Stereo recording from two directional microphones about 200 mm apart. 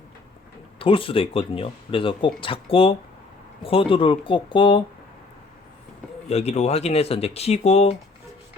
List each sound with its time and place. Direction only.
0.8 s speech: 25° left (ahead or behind)
6.2 s speech: 30° left (ahead or behind)